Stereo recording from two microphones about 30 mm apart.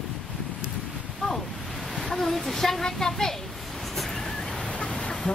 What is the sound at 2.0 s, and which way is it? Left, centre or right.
A woman's voice, centre.